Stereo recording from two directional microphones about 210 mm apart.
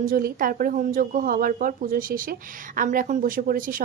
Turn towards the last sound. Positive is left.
turn(degrees=-40)  # may be behind; listen again after turning